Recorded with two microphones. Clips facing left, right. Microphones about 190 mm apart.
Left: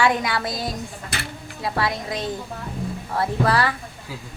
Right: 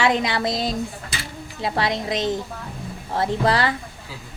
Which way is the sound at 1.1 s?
60° left (ahead or behind).